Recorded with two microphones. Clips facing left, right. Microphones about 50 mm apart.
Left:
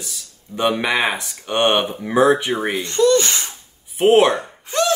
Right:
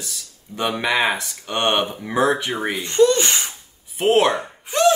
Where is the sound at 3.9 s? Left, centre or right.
Centre.